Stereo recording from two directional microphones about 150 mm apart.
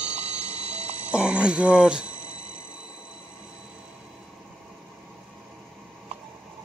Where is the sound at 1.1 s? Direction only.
5° right (ahead or behind).